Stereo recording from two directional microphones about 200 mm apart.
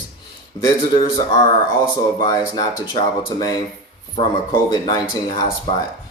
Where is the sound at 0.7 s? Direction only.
20° left (ahead or behind).